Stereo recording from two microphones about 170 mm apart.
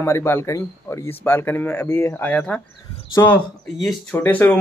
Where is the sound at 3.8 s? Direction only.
10° left (ahead or behind).